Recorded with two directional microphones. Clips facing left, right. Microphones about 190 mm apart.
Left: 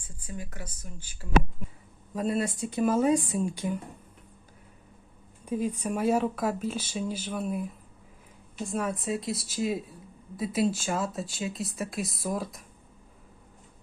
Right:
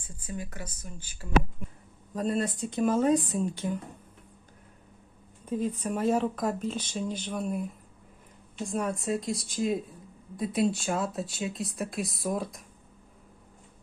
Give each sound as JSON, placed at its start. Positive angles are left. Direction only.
{"t": 2.1, "sound": "speech", "side_deg": 10}
{"t": 5.5, "sound": "speech", "side_deg": 10}